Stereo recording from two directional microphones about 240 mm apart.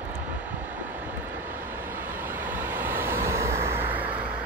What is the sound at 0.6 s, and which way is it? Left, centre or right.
Vehicle, centre.